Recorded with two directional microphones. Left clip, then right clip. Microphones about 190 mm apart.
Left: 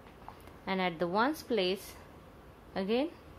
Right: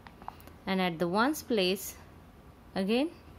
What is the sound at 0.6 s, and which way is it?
A woman's voice, 35° right (ahead or behind).